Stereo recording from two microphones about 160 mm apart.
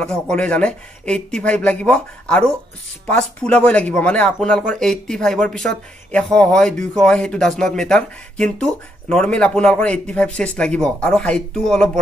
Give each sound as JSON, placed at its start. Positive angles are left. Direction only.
{"t": 0.0, "sound": "speech", "side_deg": 5}